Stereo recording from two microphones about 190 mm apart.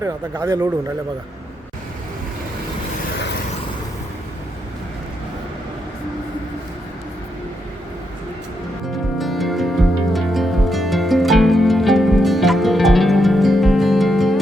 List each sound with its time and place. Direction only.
0.0 s speech: 15° right (ahead or behind)
9.1 s music: centre (ahead or behind)